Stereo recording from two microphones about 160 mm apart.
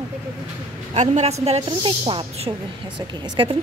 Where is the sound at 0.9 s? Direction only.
45° right (ahead or behind).